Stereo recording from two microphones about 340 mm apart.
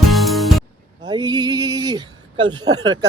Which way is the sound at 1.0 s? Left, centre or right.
Centre.